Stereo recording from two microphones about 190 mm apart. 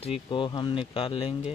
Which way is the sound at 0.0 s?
30° left (ahead or behind).